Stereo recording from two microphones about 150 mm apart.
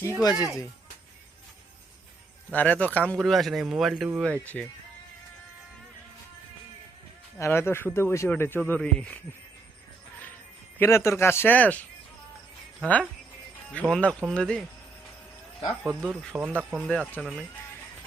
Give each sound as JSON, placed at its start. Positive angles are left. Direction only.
{"t": 0.2, "sound": "speech", "side_deg": 25}
{"t": 2.5, "sound": "speech", "side_deg": 10}
{"t": 4.2, "sound": "speech", "side_deg": 10}
{"t": 7.3, "sound": "speech", "side_deg": 15}
{"t": 10.8, "sound": "speech", "side_deg": 15}
{"t": 13.7, "sound": "speech", "side_deg": 5}
{"t": 15.8, "sound": "speech", "side_deg": -5}
{"t": 16.3, "sound": "speech", "side_deg": -10}
{"t": 16.8, "sound": "speech", "side_deg": 5}